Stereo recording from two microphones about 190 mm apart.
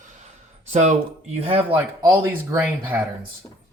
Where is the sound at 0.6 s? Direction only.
40° right (ahead or behind).